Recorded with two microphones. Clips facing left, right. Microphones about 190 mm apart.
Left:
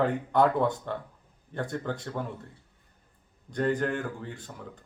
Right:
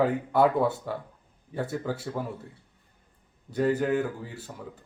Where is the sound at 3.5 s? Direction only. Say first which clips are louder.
Right 3 dB; 5° right (ahead or behind).